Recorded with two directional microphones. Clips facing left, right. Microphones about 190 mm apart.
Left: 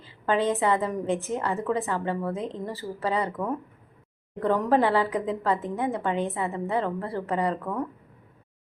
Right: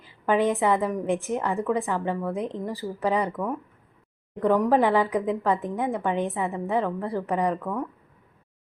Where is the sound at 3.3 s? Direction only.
5° left (ahead or behind).